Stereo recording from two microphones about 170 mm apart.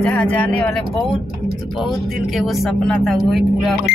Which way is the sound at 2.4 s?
Centre (ahead or behind).